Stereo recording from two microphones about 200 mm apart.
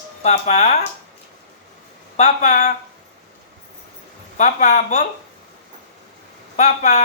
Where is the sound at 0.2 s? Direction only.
35° left (ahead or behind).